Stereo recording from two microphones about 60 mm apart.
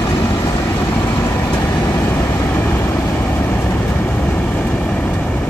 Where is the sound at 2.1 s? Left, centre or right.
Left.